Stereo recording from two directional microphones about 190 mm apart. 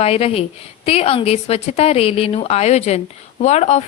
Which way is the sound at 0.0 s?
30° left (ahead or behind).